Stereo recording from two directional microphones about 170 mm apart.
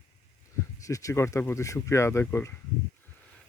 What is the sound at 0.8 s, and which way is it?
Speech, 20° left (ahead or behind).